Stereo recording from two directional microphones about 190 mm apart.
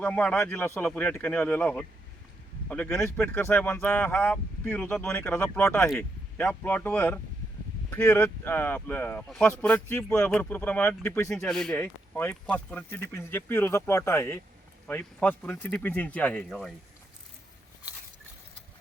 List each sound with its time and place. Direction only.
0.0 s speech: 5° left (ahead or behind)
11.4 s speech: centre (ahead or behind)